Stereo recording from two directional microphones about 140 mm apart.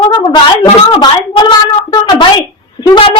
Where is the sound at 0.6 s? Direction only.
35° left (ahead or behind).